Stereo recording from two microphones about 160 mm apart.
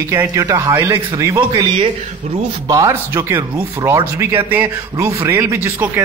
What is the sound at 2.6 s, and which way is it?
A man's voice, 20° right (ahead or behind).